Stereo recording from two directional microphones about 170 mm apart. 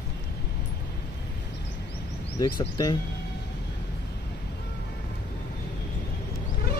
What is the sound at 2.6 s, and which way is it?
Speech, 25° left (ahead or behind).